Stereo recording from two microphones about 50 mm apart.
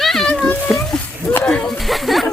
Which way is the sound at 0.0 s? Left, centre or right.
Centre.